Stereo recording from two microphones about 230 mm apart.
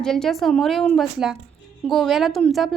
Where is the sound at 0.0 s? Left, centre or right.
Centre.